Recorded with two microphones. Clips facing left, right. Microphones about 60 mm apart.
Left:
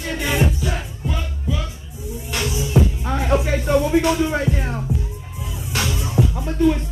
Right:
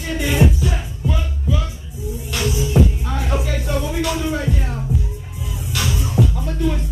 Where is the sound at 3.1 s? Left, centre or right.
Left.